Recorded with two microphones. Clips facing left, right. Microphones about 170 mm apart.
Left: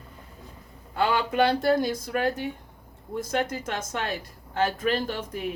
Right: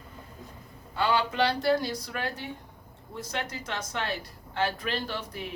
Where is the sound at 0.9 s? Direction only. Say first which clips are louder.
Left 3 dB; 50° left (ahead or behind).